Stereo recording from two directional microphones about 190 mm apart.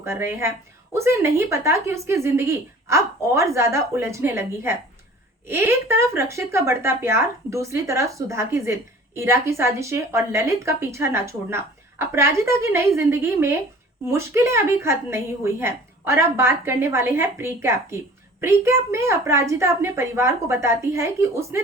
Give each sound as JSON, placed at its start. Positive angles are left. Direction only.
{"t": 0.0, "sound": "speech", "side_deg": -15}